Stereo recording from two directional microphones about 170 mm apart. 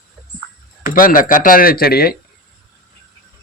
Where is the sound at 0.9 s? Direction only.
55° left (ahead or behind).